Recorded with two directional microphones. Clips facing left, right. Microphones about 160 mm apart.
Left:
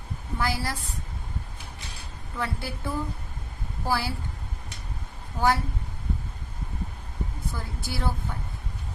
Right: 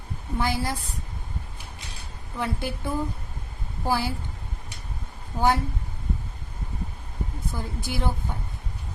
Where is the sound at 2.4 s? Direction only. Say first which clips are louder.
Right 3 dB; 20° right (ahead or behind).